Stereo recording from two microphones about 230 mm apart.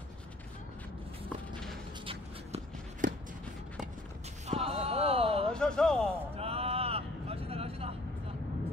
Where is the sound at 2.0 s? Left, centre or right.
Right.